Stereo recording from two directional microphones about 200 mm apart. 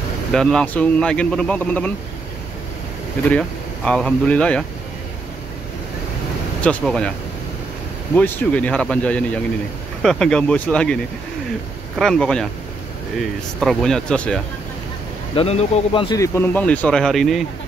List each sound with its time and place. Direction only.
0.3 s speech: 5° left (ahead or behind)
3.3 s speech: 5° left (ahead or behind)
6.6 s speech: 5° left (ahead or behind)
8.2 s speech: 10° left (ahead or behind)
12.0 s speech: 5° left (ahead or behind)
13.6 s speech: 5° left (ahead or behind)
15.3 s a man's voice: 30° left (ahead or behind)
16.2 s speech: 10° left (ahead or behind)